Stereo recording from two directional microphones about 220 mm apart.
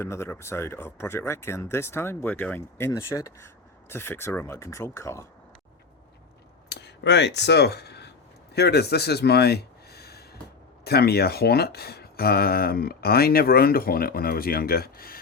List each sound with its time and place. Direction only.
0.0 s speech: 10° left (ahead or behind)
6.7 s a sound: 50° left (ahead or behind)
8.5 s speech: 45° left (ahead or behind)